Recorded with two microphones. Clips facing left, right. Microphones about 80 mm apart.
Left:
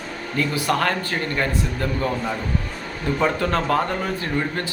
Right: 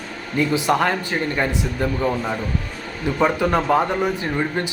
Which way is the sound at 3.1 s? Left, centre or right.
Centre.